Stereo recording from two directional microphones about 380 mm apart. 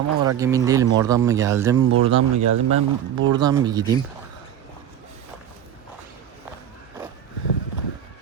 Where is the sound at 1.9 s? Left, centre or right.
Right.